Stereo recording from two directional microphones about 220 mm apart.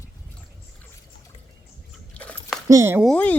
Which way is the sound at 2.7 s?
10° right (ahead or behind).